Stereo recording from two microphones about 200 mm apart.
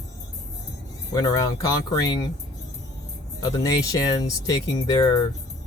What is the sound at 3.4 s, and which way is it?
Speech, 20° left (ahead or behind).